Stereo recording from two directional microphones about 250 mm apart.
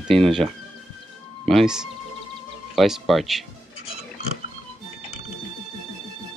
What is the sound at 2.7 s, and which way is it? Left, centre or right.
Speech, centre.